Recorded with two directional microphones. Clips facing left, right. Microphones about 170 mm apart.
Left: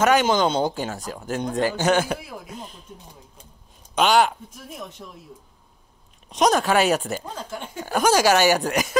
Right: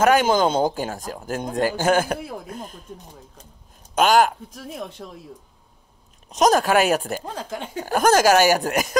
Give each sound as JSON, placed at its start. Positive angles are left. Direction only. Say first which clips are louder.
{"t": 0.0, "sound": "speech", "louder": "right 1 dB", "side_deg": -50}
{"t": 3.9, "sound": "speech", "louder": "right 2 dB", "side_deg": -45}
{"t": 4.7, "sound": "speech", "louder": "right 4 dB", "side_deg": -55}
{"t": 6.3, "sound": "speech", "louder": "right 2 dB", "side_deg": 0}
{"t": 6.6, "sound": "speech", "louder": "right 1 dB", "side_deg": -45}